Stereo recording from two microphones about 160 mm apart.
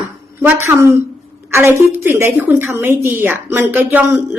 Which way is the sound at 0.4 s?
15° right (ahead or behind).